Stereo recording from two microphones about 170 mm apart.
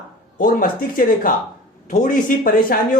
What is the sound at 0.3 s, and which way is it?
Speech, 55° left (ahead or behind).